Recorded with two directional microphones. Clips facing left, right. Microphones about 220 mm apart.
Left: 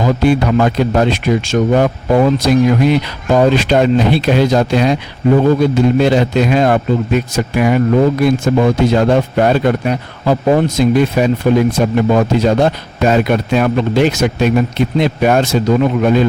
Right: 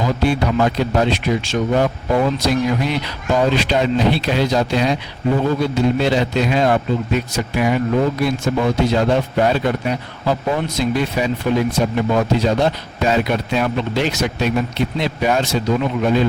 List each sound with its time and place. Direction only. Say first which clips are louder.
0.0 s speech: left 5 dB; 50° left (ahead or behind)